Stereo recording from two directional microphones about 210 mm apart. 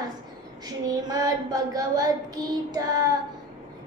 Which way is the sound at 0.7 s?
20° right (ahead or behind).